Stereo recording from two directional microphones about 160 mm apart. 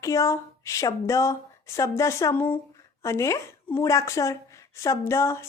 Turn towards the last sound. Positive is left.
turn(degrees=15)  # may be behind; listen again after turning